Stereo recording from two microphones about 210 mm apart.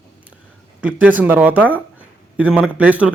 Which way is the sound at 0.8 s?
5° right (ahead or behind).